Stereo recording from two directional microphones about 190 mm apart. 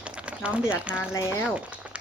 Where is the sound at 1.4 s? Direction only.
5° right (ahead or behind).